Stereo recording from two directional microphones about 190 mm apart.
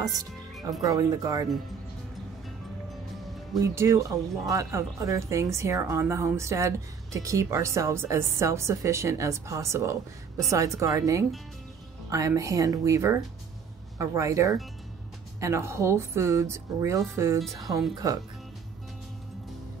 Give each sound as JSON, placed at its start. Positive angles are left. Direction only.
{"t": 0.8, "sound": "speech", "side_deg": -20}
{"t": 3.6, "sound": "speech", "side_deg": -15}